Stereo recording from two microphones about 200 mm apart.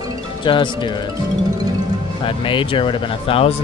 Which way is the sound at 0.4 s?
25° left (ahead or behind).